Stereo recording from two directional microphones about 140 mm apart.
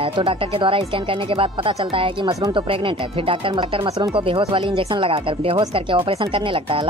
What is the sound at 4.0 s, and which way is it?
Speech, 40° right (ahead or behind).